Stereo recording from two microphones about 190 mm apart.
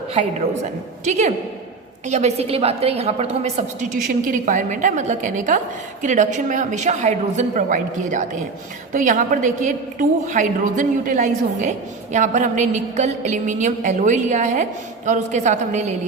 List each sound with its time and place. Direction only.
1.0 s a woman's voice: 40° right (ahead or behind)